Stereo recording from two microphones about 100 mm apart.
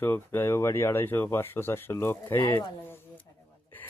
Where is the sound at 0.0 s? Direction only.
20° left (ahead or behind).